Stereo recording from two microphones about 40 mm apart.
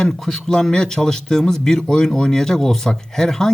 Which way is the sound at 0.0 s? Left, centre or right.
Centre.